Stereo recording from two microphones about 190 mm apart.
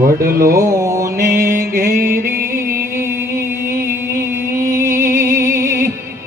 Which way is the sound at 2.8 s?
15° right (ahead or behind).